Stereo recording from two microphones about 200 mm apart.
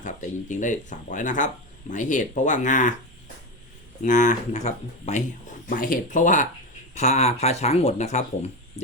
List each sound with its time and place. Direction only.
0.0 s speech: 40° left (ahead or behind)
4.0 s speech: 40° left (ahead or behind)